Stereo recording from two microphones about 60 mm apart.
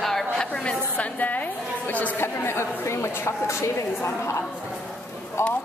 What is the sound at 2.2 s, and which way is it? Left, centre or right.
Speech, left.